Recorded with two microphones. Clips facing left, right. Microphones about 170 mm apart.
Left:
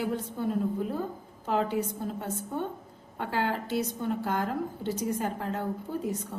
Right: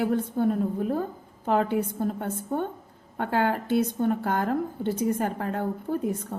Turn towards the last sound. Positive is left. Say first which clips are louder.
# right 5 dB
turn(degrees=-55)  # may be behind; listen again after turning